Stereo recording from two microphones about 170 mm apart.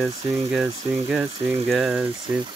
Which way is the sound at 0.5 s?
5° right (ahead or behind).